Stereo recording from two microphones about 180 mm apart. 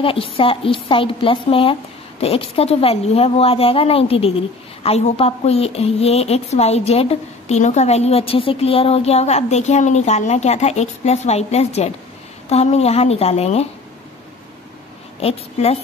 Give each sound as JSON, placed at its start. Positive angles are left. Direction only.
{"t": 0.0, "sound": "speech", "side_deg": 30}
{"t": 15.1, "sound": "speech", "side_deg": 35}